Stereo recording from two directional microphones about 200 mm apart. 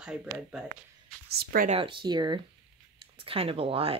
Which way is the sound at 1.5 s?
45° right (ahead or behind).